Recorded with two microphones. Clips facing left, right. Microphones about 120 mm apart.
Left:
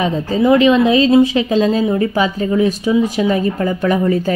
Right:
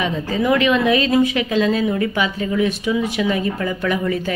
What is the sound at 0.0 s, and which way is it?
A woman's voice, 35° left (ahead or behind).